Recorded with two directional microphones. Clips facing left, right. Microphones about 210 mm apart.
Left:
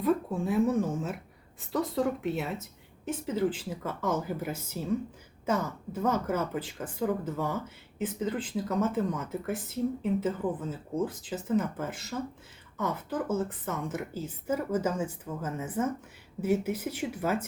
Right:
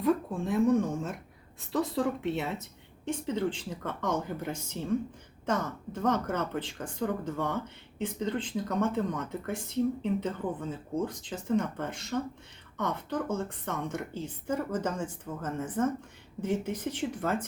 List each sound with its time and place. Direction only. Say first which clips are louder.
0.0 s a woman's voice: even; 5° left (ahead or behind)